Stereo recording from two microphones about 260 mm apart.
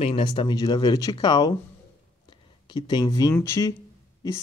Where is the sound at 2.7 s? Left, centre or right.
Centre.